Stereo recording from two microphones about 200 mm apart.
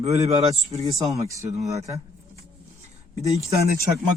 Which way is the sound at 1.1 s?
15° right (ahead or behind).